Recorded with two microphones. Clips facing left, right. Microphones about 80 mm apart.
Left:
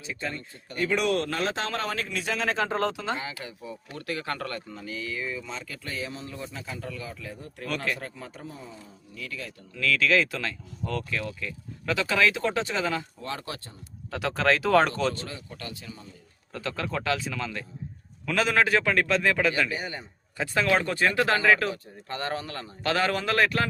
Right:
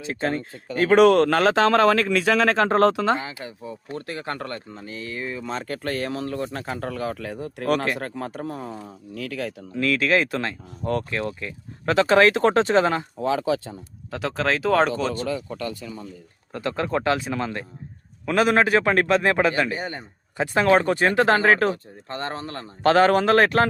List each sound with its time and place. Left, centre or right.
0.0 s speech: right
3.2 s speech: right
9.7 s speech: right
14.1 s speech: centre
16.5 s speech: right
19.1 s speech: right
20.3 s speech: right